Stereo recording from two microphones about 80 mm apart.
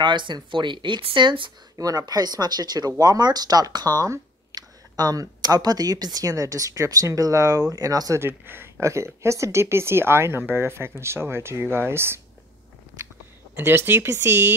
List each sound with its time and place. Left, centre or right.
0.0 s speech: right
1.8 s speech: right
8.2 s speech: right
13.6 s speech: right